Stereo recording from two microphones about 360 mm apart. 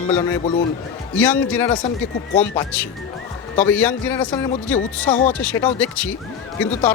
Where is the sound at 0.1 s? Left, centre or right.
Centre.